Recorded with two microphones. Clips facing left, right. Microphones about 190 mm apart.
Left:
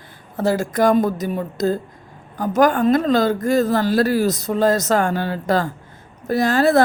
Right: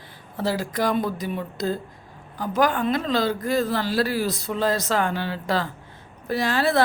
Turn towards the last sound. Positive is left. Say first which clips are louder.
# left 6 dB
turn(degrees=45)  # may be behind; listen again after turning